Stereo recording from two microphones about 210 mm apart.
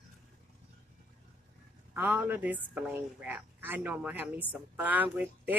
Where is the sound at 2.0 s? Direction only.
10° right (ahead or behind).